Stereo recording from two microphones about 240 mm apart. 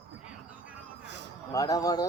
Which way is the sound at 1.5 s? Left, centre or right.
Centre.